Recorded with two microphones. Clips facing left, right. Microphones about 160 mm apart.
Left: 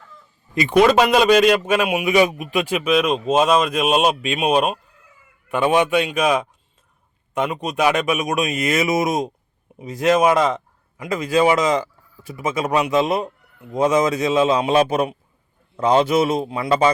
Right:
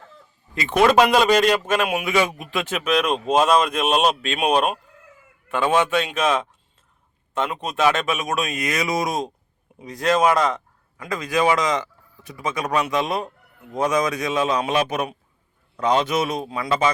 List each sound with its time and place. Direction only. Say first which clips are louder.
0.8 s a man's voice: left 1 dB; centre (ahead or behind)
5.5 s a man's voice: left 3 dB; 15° left (ahead or behind)